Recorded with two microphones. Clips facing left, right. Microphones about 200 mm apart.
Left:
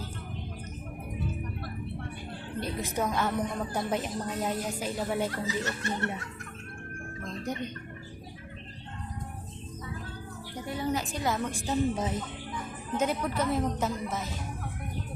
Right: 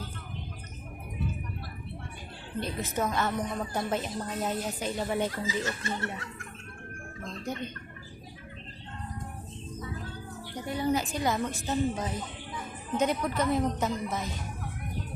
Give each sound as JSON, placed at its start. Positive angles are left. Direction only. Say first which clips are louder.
{"t": 2.6, "sound": "a woman's voice", "louder": "even", "side_deg": 15}
{"t": 5.5, "sound": "snicker", "louder": "even", "side_deg": 65}
{"t": 10.7, "sound": "a sound", "louder": "right 3 dB", "side_deg": 0}
{"t": 11.7, "sound": "a woman's voice", "louder": "left 2 dB", "side_deg": 5}